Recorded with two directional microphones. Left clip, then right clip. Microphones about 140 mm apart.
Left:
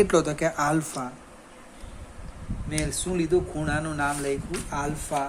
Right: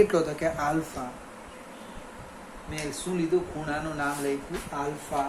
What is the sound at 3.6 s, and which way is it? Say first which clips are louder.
Speech: left 3 dB; 90° left.